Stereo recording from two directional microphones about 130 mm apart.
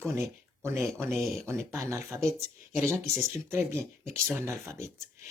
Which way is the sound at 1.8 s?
20° right (ahead or behind).